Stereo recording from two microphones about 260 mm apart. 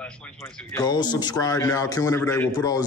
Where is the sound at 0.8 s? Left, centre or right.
Centre.